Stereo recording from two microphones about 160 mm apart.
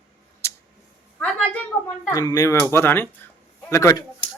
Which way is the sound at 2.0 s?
20° left (ahead or behind).